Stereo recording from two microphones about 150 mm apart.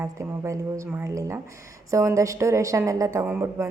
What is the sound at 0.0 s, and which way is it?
A woman's voice, 20° right (ahead or behind).